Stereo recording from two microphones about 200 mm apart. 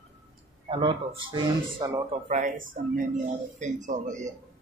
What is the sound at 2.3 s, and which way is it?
Speech, 40° right (ahead or behind).